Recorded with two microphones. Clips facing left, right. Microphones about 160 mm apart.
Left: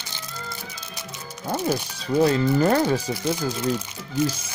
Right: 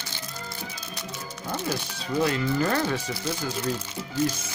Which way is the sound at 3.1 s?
20° left (ahead or behind).